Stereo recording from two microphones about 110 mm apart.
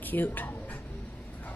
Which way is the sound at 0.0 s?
15° left (ahead or behind).